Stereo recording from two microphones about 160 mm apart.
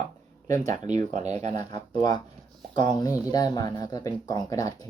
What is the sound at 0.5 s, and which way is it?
Speech, 50° right (ahead or behind).